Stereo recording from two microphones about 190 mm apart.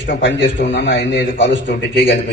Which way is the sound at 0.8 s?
70° left (ahead or behind).